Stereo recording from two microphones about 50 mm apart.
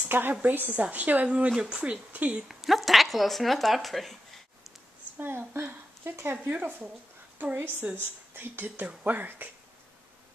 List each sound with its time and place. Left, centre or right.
0.0 s a sound: right
0.3 s speech: right
0.6 s speech: right
2.4 s speech: centre
5.1 s speech: right
7.9 s speech: right